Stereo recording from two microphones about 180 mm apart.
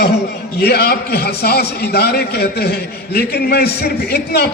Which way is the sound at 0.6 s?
60° left (ahead or behind).